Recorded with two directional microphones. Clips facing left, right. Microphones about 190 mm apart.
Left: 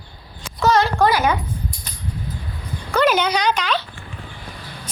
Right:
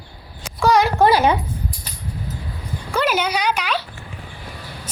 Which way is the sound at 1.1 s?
30° right (ahead or behind).